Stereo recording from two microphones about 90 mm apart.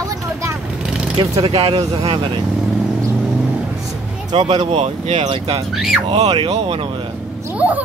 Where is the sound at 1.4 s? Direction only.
90° right.